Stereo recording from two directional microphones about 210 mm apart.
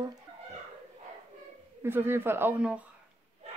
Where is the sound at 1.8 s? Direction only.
10° right (ahead or behind).